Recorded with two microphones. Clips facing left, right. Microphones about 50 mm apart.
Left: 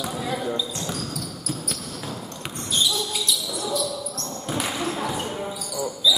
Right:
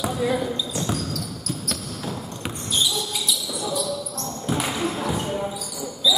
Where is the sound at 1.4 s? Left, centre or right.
Centre.